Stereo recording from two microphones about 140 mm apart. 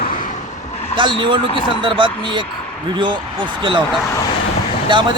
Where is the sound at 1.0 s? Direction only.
35° right (ahead or behind).